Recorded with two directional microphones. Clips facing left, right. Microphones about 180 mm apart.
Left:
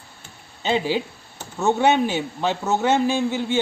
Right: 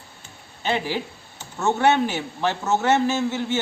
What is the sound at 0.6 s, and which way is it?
A man's voice, 20° left (ahead or behind).